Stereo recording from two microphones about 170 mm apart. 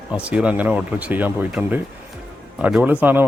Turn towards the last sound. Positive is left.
turn(degrees=-10)  # may be behind; listen again after turning